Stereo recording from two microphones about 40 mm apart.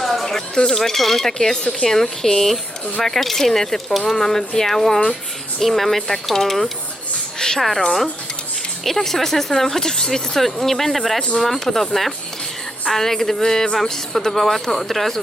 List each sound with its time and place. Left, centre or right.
0.0 s a sound: centre
0.7 s a woman's voice: centre
8.8 s speech: centre